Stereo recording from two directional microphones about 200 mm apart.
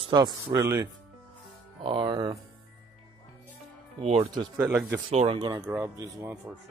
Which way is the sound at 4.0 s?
30° right (ahead or behind).